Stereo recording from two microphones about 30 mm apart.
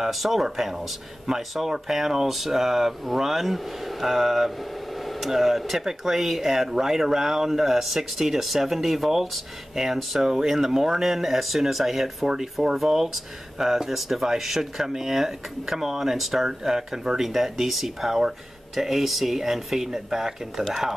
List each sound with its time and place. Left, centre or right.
0.1 s speech: centre
4.9 s a sound: centre
5.3 s speech: centre
10.2 s speech: centre